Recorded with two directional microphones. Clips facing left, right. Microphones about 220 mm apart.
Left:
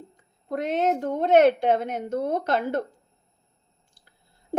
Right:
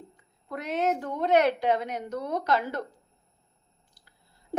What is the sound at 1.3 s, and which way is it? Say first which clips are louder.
Speech: left 5 dB; 50° left (ahead or behind).